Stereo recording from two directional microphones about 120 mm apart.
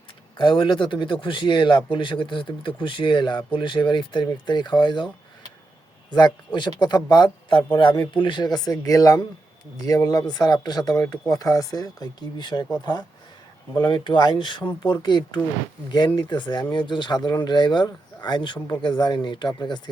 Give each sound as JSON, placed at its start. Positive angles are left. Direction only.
{"t": 0.3, "sound": "speech", "side_deg": 45}
{"t": 6.1, "sound": "speech", "side_deg": 40}
{"t": 13.7, "sound": "speech", "side_deg": 40}